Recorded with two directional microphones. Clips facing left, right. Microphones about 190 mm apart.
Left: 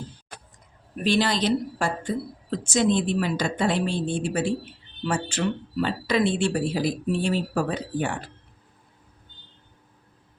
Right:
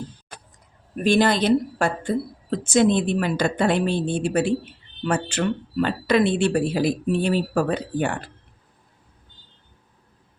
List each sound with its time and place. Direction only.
1.0 s speech: 50° right (ahead or behind)